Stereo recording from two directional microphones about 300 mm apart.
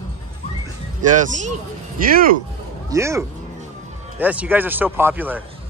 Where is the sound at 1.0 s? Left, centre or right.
Right.